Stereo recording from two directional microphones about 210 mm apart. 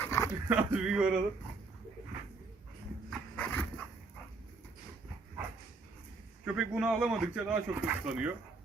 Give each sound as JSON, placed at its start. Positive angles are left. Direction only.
{"t": 0.0, "sound": "dog", "side_deg": 15}
{"t": 0.4, "sound": "speech", "side_deg": -10}
{"t": 3.1, "sound": "dog", "side_deg": 5}
{"t": 6.4, "sound": "speech", "side_deg": -5}